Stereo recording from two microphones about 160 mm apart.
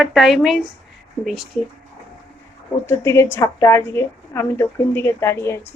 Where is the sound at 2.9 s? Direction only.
15° left (ahead or behind).